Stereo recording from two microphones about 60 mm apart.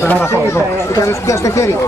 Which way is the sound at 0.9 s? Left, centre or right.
Left.